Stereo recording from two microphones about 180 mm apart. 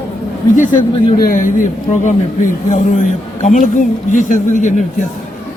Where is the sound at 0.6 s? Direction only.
45° left (ahead or behind).